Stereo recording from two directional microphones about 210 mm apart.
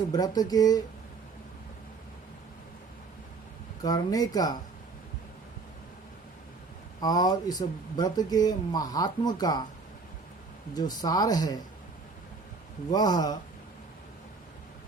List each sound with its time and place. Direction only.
0.1 s speech: 20° left (ahead or behind)
3.8 s speech: 20° left (ahead or behind)
7.0 s speech: 20° left (ahead or behind)
10.8 s speech: 20° left (ahead or behind)
12.9 s speech: 20° left (ahead or behind)